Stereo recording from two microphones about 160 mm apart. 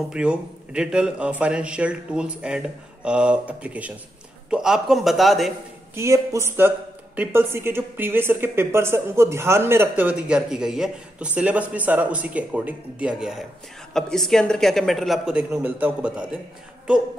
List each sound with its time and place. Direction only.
0.1 s a woman's voice: 5° right (ahead or behind)
5.9 s a woman's voice: 20° right (ahead or behind)